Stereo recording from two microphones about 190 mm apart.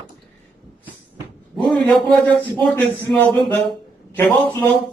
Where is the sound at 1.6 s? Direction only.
Centre (ahead or behind).